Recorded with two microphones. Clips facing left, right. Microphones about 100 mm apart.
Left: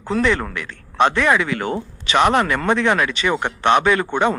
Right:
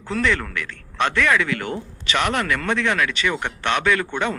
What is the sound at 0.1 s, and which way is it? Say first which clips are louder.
Speech: left 3 dB; 25° left (ahead or behind).